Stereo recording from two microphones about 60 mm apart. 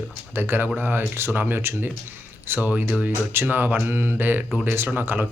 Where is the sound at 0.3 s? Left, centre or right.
Right.